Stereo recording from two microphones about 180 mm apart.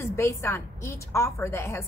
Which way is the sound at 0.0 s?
15° left (ahead or behind).